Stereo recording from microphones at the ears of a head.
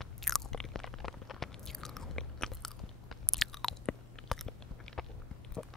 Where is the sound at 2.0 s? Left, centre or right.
Left.